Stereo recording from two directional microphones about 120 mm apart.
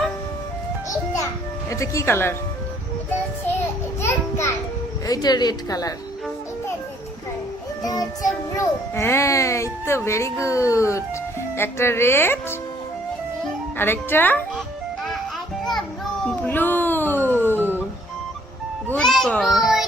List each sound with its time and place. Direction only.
0.9 s music: 25° left (ahead or behind)
1.7 s a child's voice: 25° left (ahead or behind)
4.0 s a child's voice: 20° left (ahead or behind)
5.0 s a woman's voice: 35° left (ahead or behind)
7.8 s a child's voice: 30° left (ahead or behind)
13.7 s speech: 20° left (ahead or behind)
16.2 s a sound: 15° left (ahead or behind)
18.9 s a child's voice: 5° left (ahead or behind)
19.5 s a sound: centre (ahead or behind)